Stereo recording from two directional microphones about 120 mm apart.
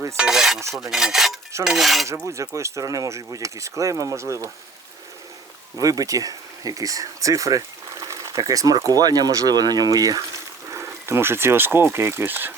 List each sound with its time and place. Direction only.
0.2 s filing: 5° right (ahead or behind)
2.2 s speech: 25° right (ahead or behind)
5.7 s speech: 30° right (ahead or behind)